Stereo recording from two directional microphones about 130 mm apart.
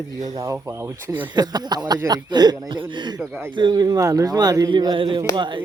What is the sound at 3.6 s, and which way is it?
Speech, 35° right (ahead or behind).